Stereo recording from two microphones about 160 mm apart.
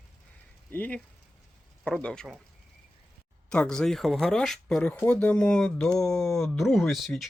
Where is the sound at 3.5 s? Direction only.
5° left (ahead or behind).